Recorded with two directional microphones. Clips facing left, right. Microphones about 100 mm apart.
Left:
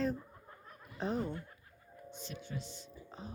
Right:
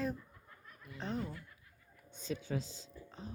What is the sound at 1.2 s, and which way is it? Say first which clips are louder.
Speech: left 4 dB; 30° left (ahead or behind).